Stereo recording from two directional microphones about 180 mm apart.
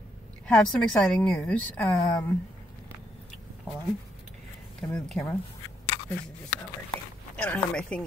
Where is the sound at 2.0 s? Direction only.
25° left (ahead or behind).